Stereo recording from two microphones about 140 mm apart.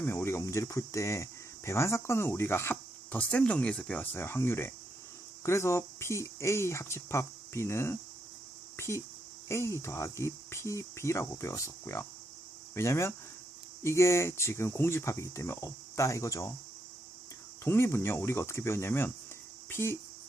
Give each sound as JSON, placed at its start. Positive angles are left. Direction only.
{"t": 0.0, "sound": "speech", "side_deg": 15}
{"t": 8.7, "sound": "a sound", "side_deg": 20}
{"t": 9.5, "sound": "speech", "side_deg": 20}
{"t": 17.6, "sound": "speech", "side_deg": 15}